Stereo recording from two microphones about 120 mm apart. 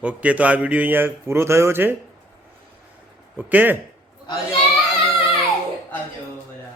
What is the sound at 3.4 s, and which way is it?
Speech, 15° right (ahead or behind).